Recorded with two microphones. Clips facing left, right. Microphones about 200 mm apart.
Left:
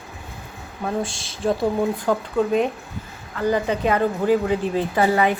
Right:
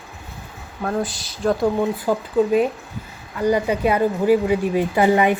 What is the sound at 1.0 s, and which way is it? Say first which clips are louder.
Speech: right 2 dB; 25° left (ahead or behind).